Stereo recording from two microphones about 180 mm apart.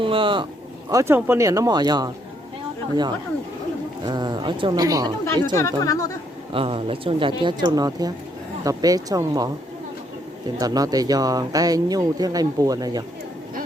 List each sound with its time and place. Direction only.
0.0 s a sound: 30° right (ahead or behind)
0.9 s speech: 15° right (ahead or behind)
4.0 s speech: 25° right (ahead or behind)
5.2 s speech: 15° left (ahead or behind)
6.5 s speech: 30° right (ahead or behind)
10.6 s speech: 20° right (ahead or behind)